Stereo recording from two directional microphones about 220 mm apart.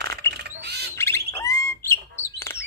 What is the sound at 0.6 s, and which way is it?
Bird, 50° right (ahead or behind).